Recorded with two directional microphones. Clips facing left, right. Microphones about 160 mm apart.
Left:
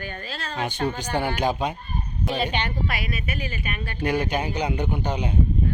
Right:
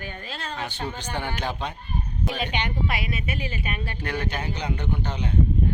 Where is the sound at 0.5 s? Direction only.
15° left (ahead or behind).